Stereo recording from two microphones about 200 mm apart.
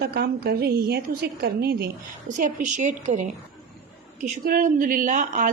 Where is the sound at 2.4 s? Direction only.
35° right (ahead or behind).